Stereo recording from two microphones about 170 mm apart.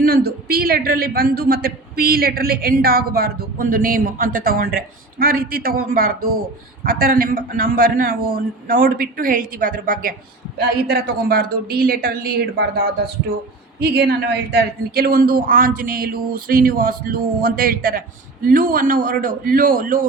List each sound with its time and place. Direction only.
0.0 s a man's voice: 65° right (ahead or behind)
10.6 s a man's voice: 65° right (ahead or behind)